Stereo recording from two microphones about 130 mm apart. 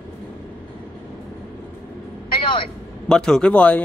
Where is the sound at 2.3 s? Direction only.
40° left (ahead or behind).